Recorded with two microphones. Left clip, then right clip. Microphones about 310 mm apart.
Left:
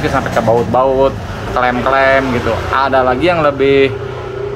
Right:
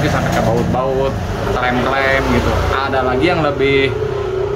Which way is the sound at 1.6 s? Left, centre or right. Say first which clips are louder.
Left 5 dB; centre.